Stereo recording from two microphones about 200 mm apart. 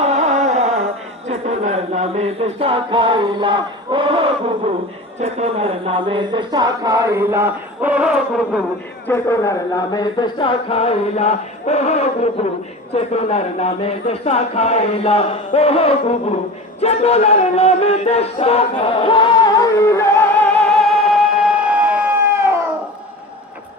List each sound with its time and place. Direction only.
0.0 s carnatic music: 35° right (ahead or behind)
1.3 s music: 35° right (ahead or behind)
5.2 s a sound: 30° right (ahead or behind); by 8.6 s 5° right (ahead or behind)
9.0 s music: 15° left (ahead or behind); by 12.5 s 30° left (ahead or behind)
12.9 s speech: 30° left (ahead or behind)
16.8 s a sound: 30° left (ahead or behind); by 22.5 s 10° right (ahead or behind)